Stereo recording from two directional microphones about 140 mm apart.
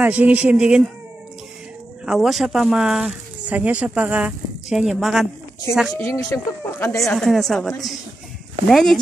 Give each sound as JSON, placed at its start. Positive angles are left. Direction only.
{"t": 0.0, "sound": "speech", "side_deg": -10}
{"t": 2.0, "sound": "speech", "side_deg": 0}
{"t": 5.9, "sound": "speech", "side_deg": 20}
{"t": 7.1, "sound": "speech", "side_deg": 0}